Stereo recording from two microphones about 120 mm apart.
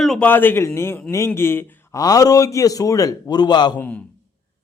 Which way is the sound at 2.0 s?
30° left (ahead or behind).